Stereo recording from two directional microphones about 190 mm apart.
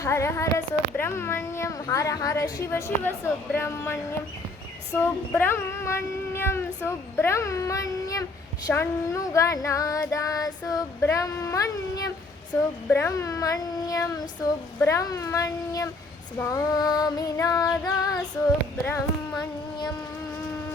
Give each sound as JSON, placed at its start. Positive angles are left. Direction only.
{"t": 0.0, "sound": "speech", "side_deg": 15}
{"t": 16.4, "sound": "female singing", "side_deg": 20}